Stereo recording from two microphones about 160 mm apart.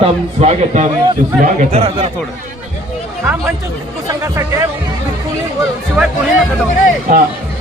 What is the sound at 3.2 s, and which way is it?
Speech, 15° right (ahead or behind).